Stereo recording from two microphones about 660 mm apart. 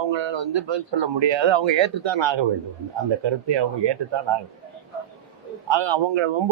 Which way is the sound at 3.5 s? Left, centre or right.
Right.